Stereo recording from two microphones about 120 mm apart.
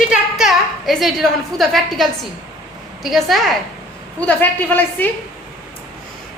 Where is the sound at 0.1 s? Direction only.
5° right (ahead or behind).